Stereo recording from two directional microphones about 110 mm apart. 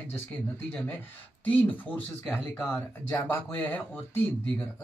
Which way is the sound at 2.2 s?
5° right (ahead or behind).